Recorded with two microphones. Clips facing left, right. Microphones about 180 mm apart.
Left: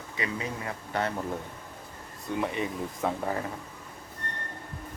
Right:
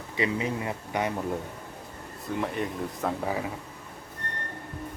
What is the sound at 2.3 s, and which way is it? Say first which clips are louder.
Speech: even; centre (ahead or behind).